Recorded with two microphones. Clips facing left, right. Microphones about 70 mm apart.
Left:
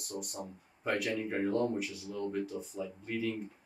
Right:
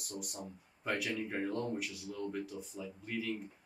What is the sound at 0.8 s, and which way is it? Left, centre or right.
Speech, centre.